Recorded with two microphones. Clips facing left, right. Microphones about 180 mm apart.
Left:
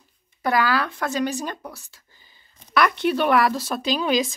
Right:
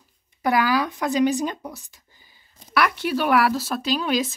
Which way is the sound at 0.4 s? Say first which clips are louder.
Right 1 dB; 15° right (ahead or behind).